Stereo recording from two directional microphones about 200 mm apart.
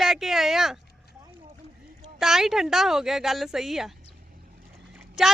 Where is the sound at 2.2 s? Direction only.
Centre (ahead or behind).